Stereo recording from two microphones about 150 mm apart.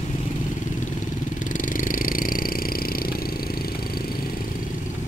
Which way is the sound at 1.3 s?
65° left (ahead or behind).